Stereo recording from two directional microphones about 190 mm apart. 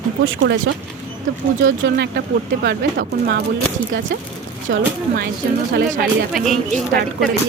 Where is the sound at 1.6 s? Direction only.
65° right (ahead or behind).